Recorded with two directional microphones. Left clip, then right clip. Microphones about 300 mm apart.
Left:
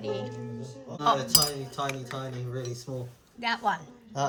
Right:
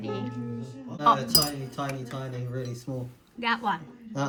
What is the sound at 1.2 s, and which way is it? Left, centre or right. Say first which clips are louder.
Speech: even; left.